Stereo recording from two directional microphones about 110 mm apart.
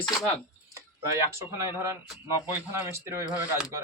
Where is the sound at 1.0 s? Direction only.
25° right (ahead or behind).